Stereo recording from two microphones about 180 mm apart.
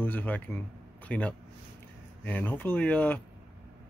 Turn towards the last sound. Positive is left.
turn(degrees=10)  # may be behind; listen again after turning